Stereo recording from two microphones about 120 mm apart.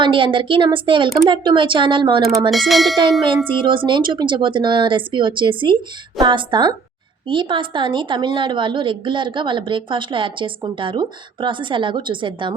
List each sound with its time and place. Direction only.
0.0 s a woman's voice: 45° right (ahead or behind)
2.5 s a sound: centre (ahead or behind)
3.4 s a woman's voice: 45° right (ahead or behind)